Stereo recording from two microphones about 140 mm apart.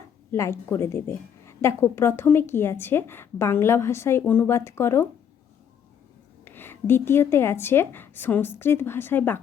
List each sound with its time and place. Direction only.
0.3 s a woman's voice: 20° left (ahead or behind)
6.4 s a woman's voice: 15° left (ahead or behind)